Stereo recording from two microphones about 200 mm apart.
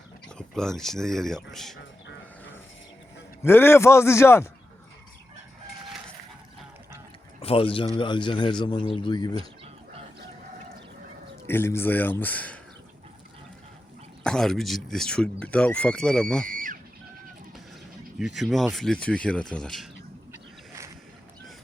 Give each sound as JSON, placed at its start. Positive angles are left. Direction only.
{"t": 0.3, "sound": "speech", "side_deg": 5}
{"t": 3.4, "sound": "speech", "side_deg": 10}
{"t": 7.4, "sound": "a man's voice", "side_deg": 25}
{"t": 11.4, "sound": "speech", "side_deg": 10}
{"t": 14.3, "sound": "speech", "side_deg": 0}
{"t": 16.5, "sound": "a sound", "side_deg": -40}
{"t": 18.2, "sound": "speech", "side_deg": 0}
{"t": 20.3, "sound": "boat", "side_deg": -15}